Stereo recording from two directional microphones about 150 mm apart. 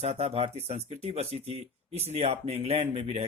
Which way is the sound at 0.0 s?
45° right (ahead or behind).